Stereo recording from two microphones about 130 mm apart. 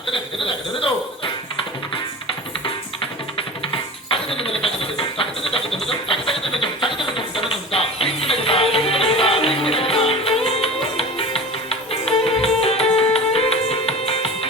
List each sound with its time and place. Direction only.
0.1 s speech: 45° left (ahead or behind)
3.7 s music: 45° left (ahead or behind)
5.8 s a sound: 45° left (ahead or behind)
9.6 s music: 45° left (ahead or behind)